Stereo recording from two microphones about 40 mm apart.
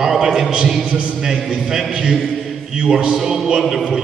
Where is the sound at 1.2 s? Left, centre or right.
Centre.